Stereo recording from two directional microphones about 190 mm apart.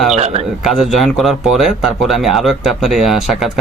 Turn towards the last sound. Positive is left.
turn(degrees=0)  # may be behind; listen again after turning